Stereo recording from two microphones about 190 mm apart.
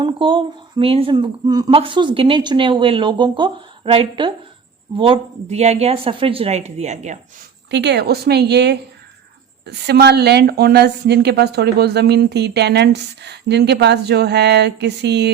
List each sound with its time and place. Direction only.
0.0 s speech: 25° right (ahead or behind)
7.7 s a woman's voice: 65° right (ahead or behind)